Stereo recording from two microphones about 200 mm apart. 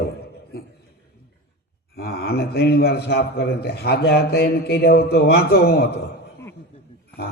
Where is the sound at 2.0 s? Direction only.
50° left (ahead or behind).